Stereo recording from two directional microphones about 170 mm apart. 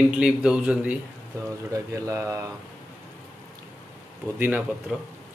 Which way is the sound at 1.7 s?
20° right (ahead or behind).